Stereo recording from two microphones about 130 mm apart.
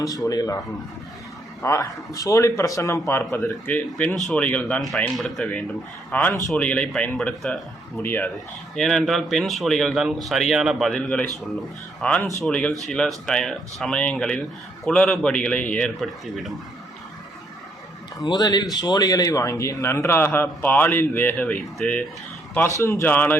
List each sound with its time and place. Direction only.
0.0 s speech: 25° left (ahead or behind)
1.6 s speech: 25° left (ahead or behind)
3.7 s speech: 10° left (ahead or behind)
4.1 s speech: centre (ahead or behind)
6.1 s a man's voice: 10° left (ahead or behind)
7.9 s speech: 15° left (ahead or behind)
8.7 s speech: 5° left (ahead or behind)
18.2 s speech: 30° left (ahead or behind); by 22.0 s 5° left (ahead or behind)
22.8 s speech: 20° left (ahead or behind)